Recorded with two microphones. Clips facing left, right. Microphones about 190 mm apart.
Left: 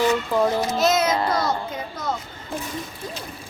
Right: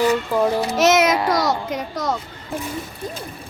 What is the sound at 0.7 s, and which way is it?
A child's voice, 85° right.